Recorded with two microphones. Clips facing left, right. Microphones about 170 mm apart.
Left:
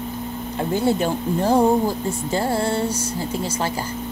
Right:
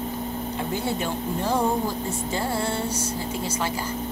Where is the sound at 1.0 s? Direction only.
35° left (ahead or behind).